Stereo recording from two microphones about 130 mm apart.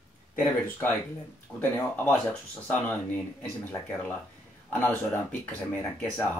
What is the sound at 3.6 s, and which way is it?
Speech, 15° left (ahead or behind).